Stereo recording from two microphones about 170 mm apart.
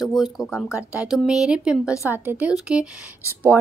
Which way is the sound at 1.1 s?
5° right (ahead or behind).